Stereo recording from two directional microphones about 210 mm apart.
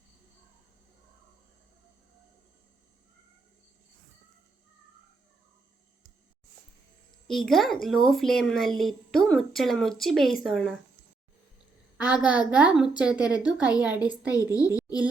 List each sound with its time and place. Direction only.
7.3 s a woman's voice: centre (ahead or behind)
11.9 s a woman's voice: 5° right (ahead or behind)
14.3 s a child's voice: 15° left (ahead or behind)